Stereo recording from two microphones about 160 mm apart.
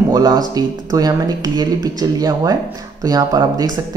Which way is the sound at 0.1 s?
25° right (ahead or behind).